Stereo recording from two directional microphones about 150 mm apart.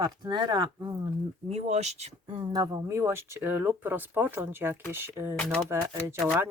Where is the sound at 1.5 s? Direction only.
50° right (ahead or behind).